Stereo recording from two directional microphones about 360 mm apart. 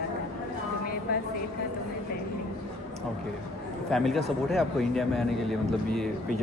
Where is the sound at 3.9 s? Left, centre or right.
Centre.